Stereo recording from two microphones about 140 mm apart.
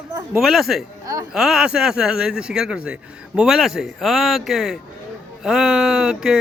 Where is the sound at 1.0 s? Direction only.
25° right (ahead or behind).